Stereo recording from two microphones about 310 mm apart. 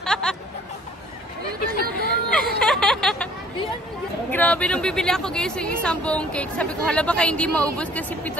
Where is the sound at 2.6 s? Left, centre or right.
Centre.